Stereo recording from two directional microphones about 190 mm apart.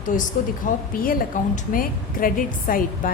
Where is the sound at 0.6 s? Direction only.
45° left (ahead or behind).